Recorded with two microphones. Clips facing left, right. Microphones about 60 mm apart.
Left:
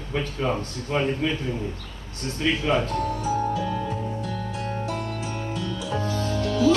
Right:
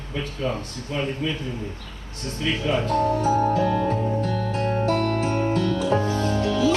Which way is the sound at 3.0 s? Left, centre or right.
Right.